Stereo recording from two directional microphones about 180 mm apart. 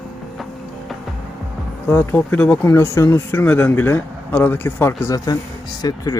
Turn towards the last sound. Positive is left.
turn(degrees=20)  # may be behind; listen again after turning